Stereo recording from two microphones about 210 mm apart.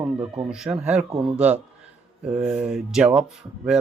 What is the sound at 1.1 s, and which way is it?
Speech, 25° right (ahead or behind).